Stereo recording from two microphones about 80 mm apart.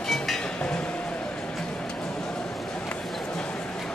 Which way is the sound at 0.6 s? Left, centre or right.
Centre.